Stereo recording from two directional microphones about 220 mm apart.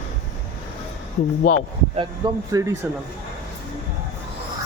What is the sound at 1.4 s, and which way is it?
Speech, 40° left (ahead or behind).